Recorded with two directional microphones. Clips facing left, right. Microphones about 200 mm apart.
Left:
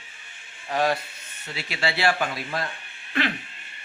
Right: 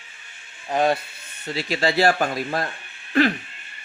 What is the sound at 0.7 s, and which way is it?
Speech, 25° right (ahead or behind).